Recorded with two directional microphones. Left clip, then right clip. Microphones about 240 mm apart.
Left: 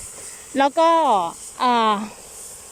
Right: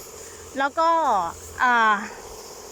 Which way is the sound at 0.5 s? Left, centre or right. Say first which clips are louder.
Left 4 dB; left.